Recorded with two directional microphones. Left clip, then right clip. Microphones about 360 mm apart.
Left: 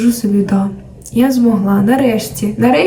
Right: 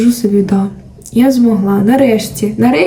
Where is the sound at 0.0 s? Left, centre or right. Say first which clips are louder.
Right 3 dB; centre.